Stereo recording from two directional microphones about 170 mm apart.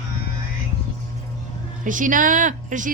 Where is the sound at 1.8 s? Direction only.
50° right (ahead or behind).